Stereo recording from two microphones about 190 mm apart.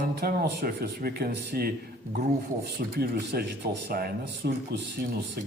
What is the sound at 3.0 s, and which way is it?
Speech, 55° right (ahead or behind).